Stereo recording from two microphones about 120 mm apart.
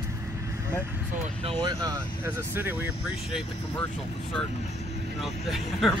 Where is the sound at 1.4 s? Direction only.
45° right (ahead or behind).